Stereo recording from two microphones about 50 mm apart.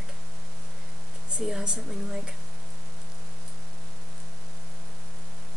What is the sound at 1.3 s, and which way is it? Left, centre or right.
A woman's voice, centre.